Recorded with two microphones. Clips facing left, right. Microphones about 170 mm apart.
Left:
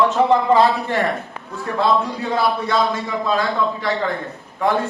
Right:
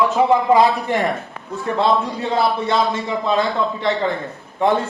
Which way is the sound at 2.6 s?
25° right (ahead or behind).